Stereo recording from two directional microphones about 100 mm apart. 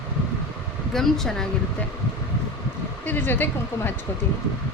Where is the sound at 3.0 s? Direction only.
20° left (ahead or behind).